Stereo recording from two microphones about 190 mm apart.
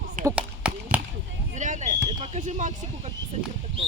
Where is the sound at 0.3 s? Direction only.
5° right (ahead or behind).